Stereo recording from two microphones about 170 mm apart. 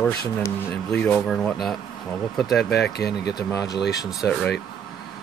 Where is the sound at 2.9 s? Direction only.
75° left (ahead or behind).